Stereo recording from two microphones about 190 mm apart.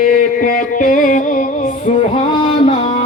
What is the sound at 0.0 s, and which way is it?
Music, 45° left (ahead or behind).